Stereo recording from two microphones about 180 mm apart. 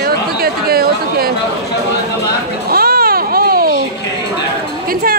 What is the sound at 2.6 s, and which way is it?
Baby cry, 55° right (ahead or behind).